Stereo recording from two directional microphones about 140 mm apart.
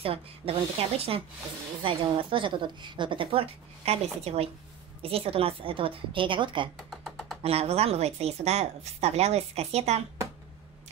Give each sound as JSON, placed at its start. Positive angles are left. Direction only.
{"t": 0.0, "sound": "a woman's voice", "side_deg": -40}
{"t": 6.9, "sound": "a sound", "side_deg": 0}
{"t": 7.4, "sound": "speech", "side_deg": -45}